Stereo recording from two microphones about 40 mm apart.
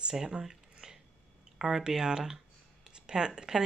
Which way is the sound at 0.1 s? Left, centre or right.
Centre.